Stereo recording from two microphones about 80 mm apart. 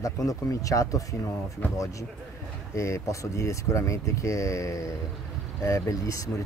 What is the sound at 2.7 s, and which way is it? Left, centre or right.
A man's voice, left.